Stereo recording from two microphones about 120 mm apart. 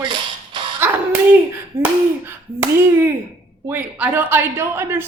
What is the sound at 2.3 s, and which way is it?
Speech, 20° right (ahead or behind).